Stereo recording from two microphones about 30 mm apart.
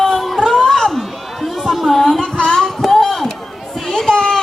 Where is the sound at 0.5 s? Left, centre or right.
Centre.